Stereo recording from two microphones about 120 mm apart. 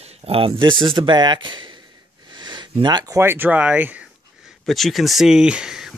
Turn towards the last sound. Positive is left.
turn(degrees=-5)  # may be behind; listen again after turning